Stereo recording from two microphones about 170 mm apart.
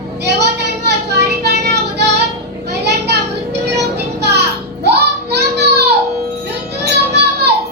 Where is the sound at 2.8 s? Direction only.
80° right.